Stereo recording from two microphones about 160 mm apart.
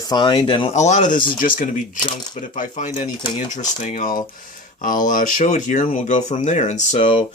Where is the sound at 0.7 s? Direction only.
45° left (ahead or behind).